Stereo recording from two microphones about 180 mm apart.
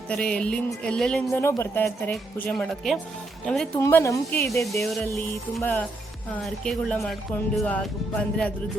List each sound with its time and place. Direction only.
0.1 s speech: 5° left (ahead or behind)
3.8 s speech: 15° left (ahead or behind)
4.6 s speech: centre (ahead or behind)